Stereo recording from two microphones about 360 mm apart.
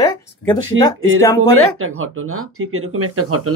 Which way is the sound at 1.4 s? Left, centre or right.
Right.